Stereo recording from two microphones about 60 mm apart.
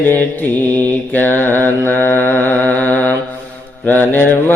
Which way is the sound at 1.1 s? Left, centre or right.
Left.